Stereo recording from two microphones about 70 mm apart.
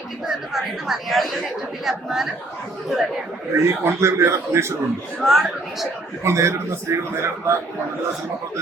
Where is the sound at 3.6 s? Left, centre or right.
Right.